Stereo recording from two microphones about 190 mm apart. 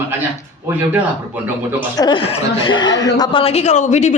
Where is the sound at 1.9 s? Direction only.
25° left (ahead or behind).